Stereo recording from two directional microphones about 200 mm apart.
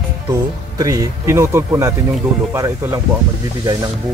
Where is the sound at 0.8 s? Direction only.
20° right (ahead or behind).